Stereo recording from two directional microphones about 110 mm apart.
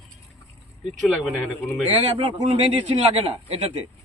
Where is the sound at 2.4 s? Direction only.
65° right (ahead or behind).